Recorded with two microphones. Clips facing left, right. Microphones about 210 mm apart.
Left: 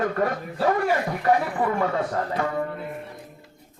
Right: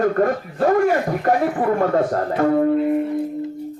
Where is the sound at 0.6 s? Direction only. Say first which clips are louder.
Right 6 dB; 45° right (ahead or behind).